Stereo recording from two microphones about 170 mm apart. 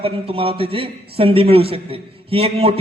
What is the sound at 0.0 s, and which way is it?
A man's voice, 35° right (ahead or behind).